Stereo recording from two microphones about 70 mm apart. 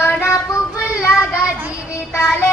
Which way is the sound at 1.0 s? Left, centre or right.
Left.